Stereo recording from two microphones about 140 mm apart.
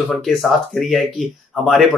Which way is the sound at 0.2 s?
Centre (ahead or behind).